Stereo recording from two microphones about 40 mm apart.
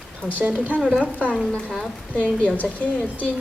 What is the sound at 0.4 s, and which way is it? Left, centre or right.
Speech, right.